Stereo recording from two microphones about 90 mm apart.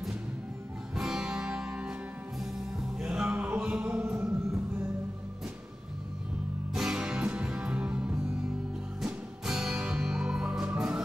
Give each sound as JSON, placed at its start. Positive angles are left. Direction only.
{"t": 0.9, "sound": "music", "side_deg": -5}
{"t": 6.7, "sound": "music", "side_deg": -5}